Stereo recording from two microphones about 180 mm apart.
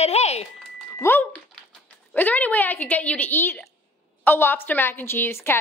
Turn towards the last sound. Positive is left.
turn(degrees=15)  # may be behind; listen again after turning